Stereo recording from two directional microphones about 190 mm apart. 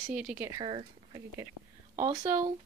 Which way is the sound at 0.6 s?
30° right (ahead or behind).